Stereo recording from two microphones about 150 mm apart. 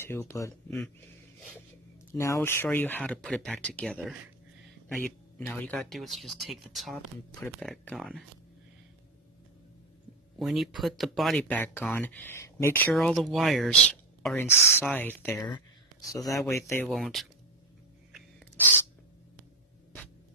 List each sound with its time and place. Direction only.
0.0 s a man's voice: 15° left (ahead or behind)
2.1 s speech: 20° left (ahead or behind)
5.8 s speech: centre (ahead or behind)
10.4 s speech: centre (ahead or behind); by 12.9 s 15° left (ahead or behind)
12.9 s a man's voice: centre (ahead or behind); by 16.8 s 20° left (ahead or behind)
16.8 s speech: centre (ahead or behind)